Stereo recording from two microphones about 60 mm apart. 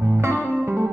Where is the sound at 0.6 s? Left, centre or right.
Right.